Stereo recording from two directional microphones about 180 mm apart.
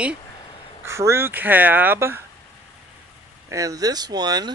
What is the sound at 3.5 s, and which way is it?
Speech, 20° right (ahead or behind).